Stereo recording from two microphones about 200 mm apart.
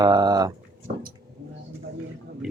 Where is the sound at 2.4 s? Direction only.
Centre (ahead or behind).